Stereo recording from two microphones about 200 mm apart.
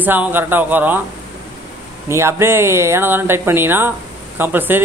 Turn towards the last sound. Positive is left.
turn(degrees=-10)  # may be behind; listen again after turning